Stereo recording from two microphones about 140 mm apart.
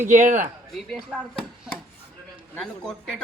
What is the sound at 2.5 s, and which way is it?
Speech, 5° left (ahead or behind).